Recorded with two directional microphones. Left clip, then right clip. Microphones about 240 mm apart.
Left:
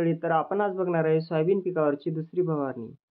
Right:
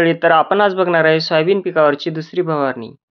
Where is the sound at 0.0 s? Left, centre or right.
Right.